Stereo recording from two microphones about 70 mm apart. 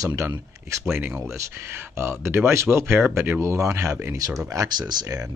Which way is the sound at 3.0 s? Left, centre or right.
Right.